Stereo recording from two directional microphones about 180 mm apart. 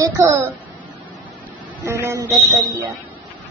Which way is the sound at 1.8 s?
15° right (ahead or behind).